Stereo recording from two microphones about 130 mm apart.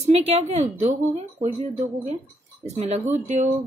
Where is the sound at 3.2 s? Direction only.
70° right (ahead or behind).